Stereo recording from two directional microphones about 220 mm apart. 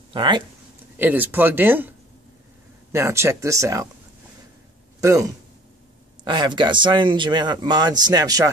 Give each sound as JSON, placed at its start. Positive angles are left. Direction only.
{"t": 0.1, "sound": "speech", "side_deg": -20}
{"t": 0.9, "sound": "speech", "side_deg": -10}
{"t": 5.0, "sound": "speech", "side_deg": -15}